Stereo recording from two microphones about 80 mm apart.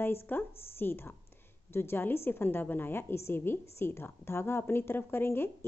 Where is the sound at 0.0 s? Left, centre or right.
Left.